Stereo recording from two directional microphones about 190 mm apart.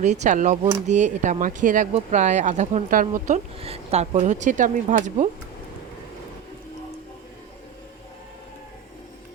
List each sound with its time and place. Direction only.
0.0 s speech: 40° right (ahead or behind)